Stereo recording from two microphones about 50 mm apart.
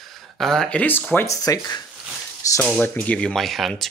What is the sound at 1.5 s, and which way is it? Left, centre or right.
Speech, left.